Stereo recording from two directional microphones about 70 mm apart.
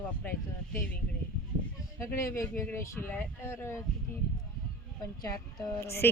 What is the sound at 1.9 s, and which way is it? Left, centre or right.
A woman's voice, left.